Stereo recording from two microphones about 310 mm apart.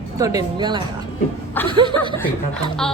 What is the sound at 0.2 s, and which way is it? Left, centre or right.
Speech, centre.